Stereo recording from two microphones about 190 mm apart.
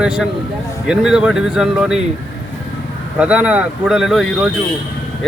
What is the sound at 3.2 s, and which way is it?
Speech, 5° right (ahead or behind).